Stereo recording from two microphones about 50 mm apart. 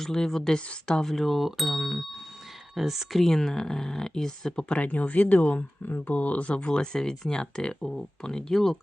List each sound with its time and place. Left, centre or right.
0.0 s speech: centre
4.7 s speech: left; by 8.8 s centre